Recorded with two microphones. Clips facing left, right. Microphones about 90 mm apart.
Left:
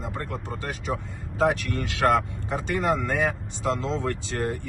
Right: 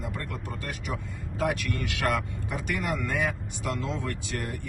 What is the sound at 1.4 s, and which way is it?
Speech, 35° left (ahead or behind).